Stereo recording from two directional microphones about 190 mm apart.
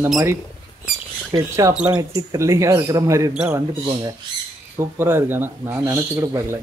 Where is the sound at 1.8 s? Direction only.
5° right (ahead or behind).